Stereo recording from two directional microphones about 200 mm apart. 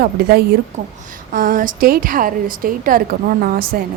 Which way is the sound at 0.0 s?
50° right (ahead or behind).